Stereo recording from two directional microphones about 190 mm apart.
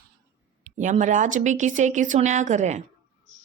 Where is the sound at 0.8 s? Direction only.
40° right (ahead or behind).